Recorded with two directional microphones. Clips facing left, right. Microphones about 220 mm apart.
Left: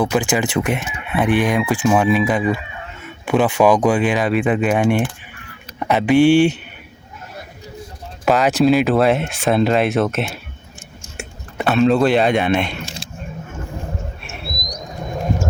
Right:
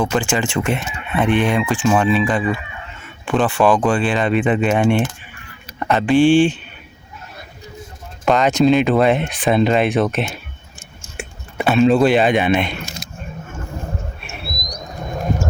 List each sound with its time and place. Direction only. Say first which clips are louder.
0.0 s speech: left 1 dB; 10° left (ahead or behind)
8.2 s speech: even; 5° left (ahead or behind)
11.5 s speech: right 1 dB; centre (ahead or behind)
12.8 s speech: even; 30° left (ahead or behind)
14.2 s a sound: even; centre (ahead or behind)